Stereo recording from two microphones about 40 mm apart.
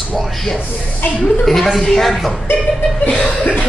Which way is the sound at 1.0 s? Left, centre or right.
Left.